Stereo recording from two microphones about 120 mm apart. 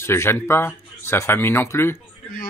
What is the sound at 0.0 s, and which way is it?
Speech, 20° left (ahead or behind).